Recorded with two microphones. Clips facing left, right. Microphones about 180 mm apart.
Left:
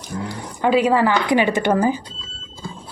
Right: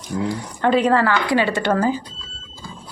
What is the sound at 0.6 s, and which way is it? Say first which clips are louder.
Speech: left 1 dB; 5° left (ahead or behind).